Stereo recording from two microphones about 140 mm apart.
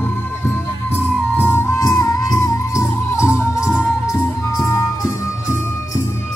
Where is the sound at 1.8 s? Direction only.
25° left (ahead or behind).